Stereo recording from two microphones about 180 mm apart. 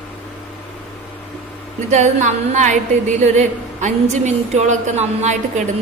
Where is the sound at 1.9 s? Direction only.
40° right (ahead or behind).